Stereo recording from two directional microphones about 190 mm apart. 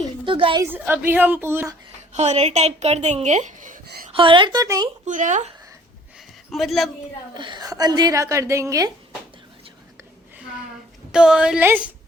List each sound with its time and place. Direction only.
0.3 s a woman's voice: 25° right (ahead or behind)
0.6 s a woman's voice: 10° right (ahead or behind)
2.1 s speech: 35° right (ahead or behind)
4.1 s a woman's voice: 25° right (ahead or behind)
5.0 s speech: 40° right (ahead or behind)
6.1 s a sound: centre (ahead or behind)
7.3 s a woman's voice: 25° right (ahead or behind)
11.1 s a woman's voice: 5° right (ahead or behind)